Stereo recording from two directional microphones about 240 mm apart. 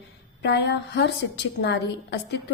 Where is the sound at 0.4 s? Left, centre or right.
Left.